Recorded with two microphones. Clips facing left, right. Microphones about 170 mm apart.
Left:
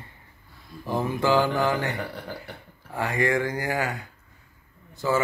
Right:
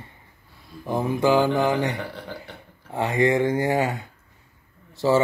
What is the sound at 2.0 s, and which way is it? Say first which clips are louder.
Speech: even; centre (ahead or behind).